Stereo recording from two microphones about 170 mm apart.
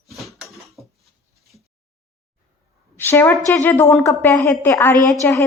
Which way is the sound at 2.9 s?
10° left (ahead or behind).